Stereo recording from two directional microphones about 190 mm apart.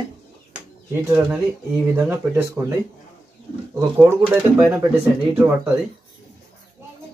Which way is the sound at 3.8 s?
10° right (ahead or behind).